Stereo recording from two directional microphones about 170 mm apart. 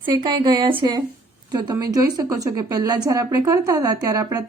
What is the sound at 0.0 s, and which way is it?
A woman's voice, 25° right (ahead or behind).